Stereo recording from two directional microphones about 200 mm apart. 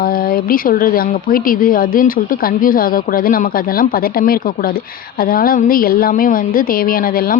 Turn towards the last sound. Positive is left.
turn(degrees=45)  # may be behind; listen again after turning